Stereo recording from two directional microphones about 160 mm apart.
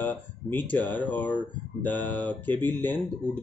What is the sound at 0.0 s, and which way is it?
Speech, 10° left (ahead or behind).